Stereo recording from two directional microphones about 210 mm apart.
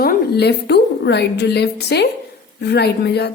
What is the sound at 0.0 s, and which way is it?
A woman's voice, 50° left (ahead or behind).